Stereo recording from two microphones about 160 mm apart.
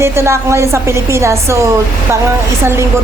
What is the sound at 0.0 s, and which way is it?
A woman's voice, 15° right (ahead or behind).